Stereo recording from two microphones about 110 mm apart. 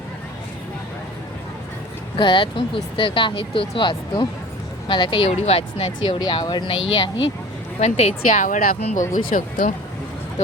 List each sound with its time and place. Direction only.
2.1 s speech: 45° left (ahead or behind)
5.4 s speech: 65° left (ahead or behind)
6.1 s speech: 40° left (ahead or behind)
7.8 s a woman's voice: 80° left